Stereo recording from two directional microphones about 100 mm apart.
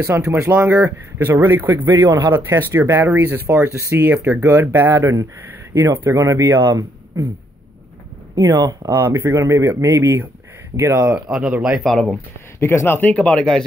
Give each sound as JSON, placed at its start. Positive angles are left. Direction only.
{"t": 0.0, "sound": "speech", "side_deg": -30}
{"t": 2.0, "sound": "speech", "side_deg": -45}
{"t": 2.3, "sound": "speech", "side_deg": -25}
{"t": 8.4, "sound": "speech", "side_deg": -35}
{"t": 11.1, "sound": "speech", "side_deg": -10}
{"t": 11.9, "sound": "speech", "side_deg": 5}
{"t": 12.5, "sound": "speech", "side_deg": 25}
{"t": 13.1, "sound": "speech", "side_deg": 10}